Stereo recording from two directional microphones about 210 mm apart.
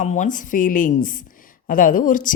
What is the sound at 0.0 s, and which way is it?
Speech, 35° left (ahead or behind).